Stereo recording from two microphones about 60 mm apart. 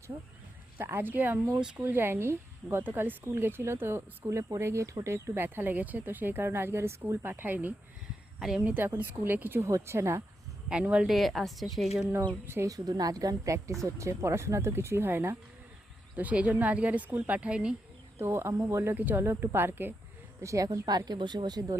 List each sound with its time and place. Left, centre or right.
0.8 s speech: right
2.8 s speech: right
8.4 s a woman's voice: centre
8.6 s speech: right
9.6 s speech: right
10.7 s speech: centre
11.0 s a woman's voice: centre
12.6 s a woman's voice: right
16.1 s a woman's voice: right
18.2 s speech: right
18.9 s speech: right
20.4 s a woman's voice: right